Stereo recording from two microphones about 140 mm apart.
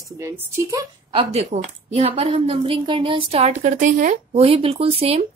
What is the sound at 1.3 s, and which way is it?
Speech, 50° right (ahead or behind).